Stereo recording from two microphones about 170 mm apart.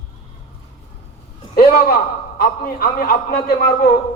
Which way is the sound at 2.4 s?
60° left (ahead or behind).